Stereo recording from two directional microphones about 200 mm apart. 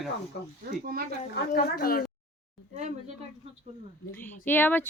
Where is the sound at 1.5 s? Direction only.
45° left (ahead or behind).